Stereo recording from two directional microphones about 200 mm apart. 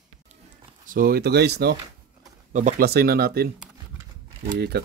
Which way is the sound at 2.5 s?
40° right (ahead or behind).